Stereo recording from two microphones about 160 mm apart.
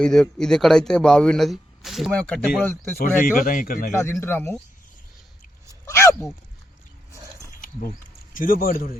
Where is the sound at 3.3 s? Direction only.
60° left (ahead or behind).